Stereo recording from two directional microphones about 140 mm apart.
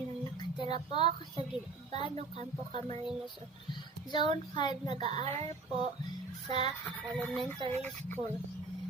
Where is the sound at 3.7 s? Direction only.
35° left (ahead or behind).